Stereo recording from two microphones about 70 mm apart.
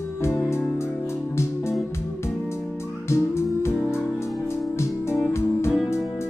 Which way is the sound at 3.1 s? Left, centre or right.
Left.